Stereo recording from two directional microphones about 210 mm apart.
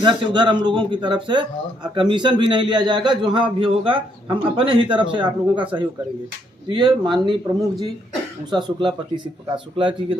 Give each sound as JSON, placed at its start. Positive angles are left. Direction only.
{"t": 0.0, "sound": "a man's voice", "side_deg": -20}
{"t": 7.0, "sound": "a man's voice", "side_deg": -20}